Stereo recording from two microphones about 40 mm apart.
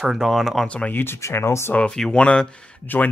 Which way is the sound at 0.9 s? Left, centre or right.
Left.